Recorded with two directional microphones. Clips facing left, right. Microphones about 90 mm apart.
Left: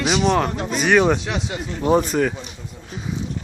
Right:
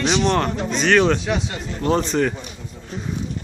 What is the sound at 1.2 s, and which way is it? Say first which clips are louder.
Speech: right 2 dB; centre (ahead or behind).